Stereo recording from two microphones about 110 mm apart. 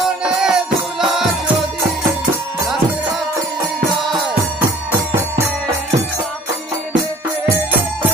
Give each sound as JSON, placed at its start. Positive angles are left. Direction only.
{"t": 0.2, "sound": "music", "side_deg": -5}